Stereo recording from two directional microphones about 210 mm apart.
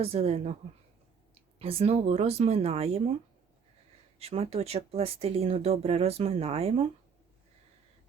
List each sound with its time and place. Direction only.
0.0 s speech: 30° right (ahead or behind)
1.5 s speech: 30° right (ahead or behind)
4.2 s speech: 30° right (ahead or behind)